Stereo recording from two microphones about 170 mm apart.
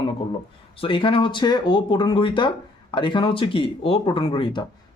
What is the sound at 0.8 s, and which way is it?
Speech, 30° left (ahead or behind).